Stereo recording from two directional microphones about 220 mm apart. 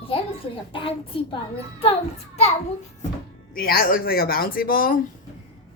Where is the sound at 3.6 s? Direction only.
40° left (ahead or behind).